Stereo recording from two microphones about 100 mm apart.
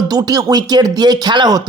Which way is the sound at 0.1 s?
40° right (ahead or behind).